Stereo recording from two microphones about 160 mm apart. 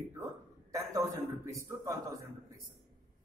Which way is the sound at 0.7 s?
20° right (ahead or behind).